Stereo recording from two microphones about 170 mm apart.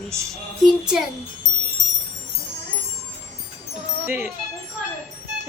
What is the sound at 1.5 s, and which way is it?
Wind chime, 45° right (ahead or behind).